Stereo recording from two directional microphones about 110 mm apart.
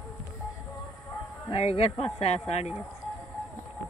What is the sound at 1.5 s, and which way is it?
A woman's voice, 65° left (ahead or behind).